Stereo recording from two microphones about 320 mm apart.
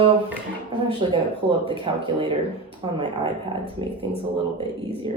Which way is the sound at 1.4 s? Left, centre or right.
Centre.